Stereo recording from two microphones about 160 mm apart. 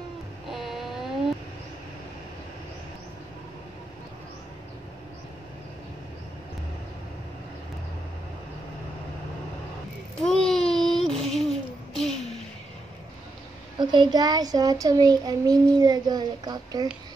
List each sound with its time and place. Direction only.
0.5 s vehicle: centre (ahead or behind)
10.2 s a sound: centre (ahead or behind)
13.7 s a child's voice: 30° right (ahead or behind)